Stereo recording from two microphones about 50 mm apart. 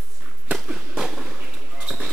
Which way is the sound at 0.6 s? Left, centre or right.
Centre.